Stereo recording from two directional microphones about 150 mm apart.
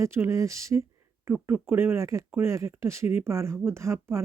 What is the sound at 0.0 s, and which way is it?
Speech, 20° right (ahead or behind).